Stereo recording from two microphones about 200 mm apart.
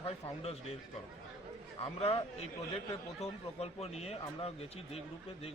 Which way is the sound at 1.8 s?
25° left (ahead or behind).